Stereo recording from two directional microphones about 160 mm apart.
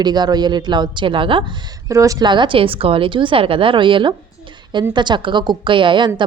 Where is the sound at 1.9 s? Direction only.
20° right (ahead or behind).